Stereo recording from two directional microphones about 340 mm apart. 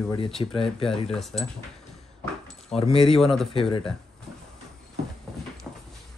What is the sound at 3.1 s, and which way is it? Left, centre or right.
Speech, centre.